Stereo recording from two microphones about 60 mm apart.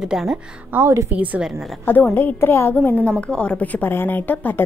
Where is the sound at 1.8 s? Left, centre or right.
Left.